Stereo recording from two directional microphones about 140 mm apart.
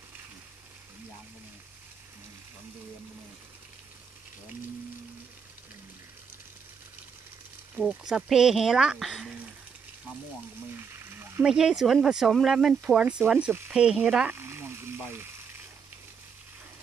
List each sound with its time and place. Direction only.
7.9 s speech: 5° right (ahead or behind)
10.7 s frying: 15° right (ahead or behind)
11.4 s speech: 5° right (ahead or behind)